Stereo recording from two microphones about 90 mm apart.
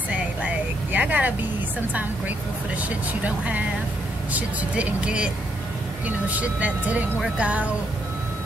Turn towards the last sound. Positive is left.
turn(degrees=-15)  # may be behind; listen again after turning